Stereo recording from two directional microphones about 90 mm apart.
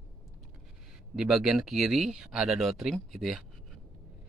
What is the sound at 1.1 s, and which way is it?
Speech, 5° right (ahead or behind).